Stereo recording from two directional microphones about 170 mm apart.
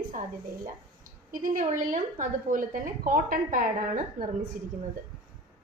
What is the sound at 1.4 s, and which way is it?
A woman's voice, 50° right (ahead or behind).